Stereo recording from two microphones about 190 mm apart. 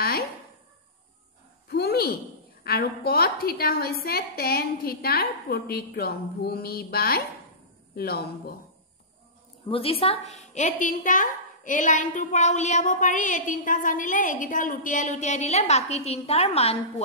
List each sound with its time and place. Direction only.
1.7 s a sound: 55° left (ahead or behind)
2.6 s a woman's voice: 55° left (ahead or behind)
9.7 s a woman's voice: 30° left (ahead or behind)